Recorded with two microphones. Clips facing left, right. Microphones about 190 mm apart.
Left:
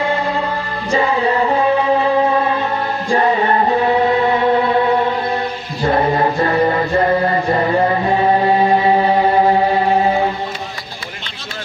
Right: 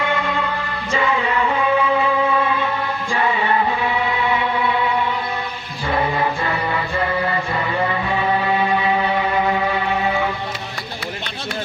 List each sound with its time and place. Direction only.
0.0 s music: 35° left (ahead or behind)
5.8 s chant: 45° left (ahead or behind)